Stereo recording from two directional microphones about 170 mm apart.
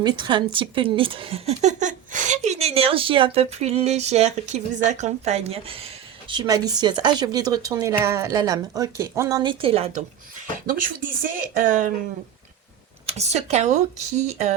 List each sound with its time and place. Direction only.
0.0 s a woman's voice: 25° right (ahead or behind)
10.7 s speech: 55° right (ahead or behind)
13.1 s a woman's voice: 40° right (ahead or behind)